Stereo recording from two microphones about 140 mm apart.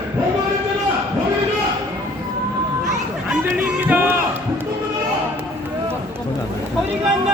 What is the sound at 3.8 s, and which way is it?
Crowd, 15° right (ahead or behind).